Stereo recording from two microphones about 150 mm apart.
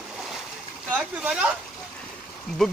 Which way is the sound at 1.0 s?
5° right (ahead or behind).